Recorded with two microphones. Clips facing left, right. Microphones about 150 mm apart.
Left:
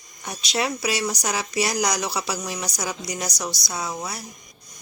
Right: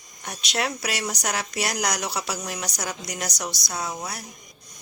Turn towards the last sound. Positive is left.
turn(degrees=5)  # may be behind; listen again after turning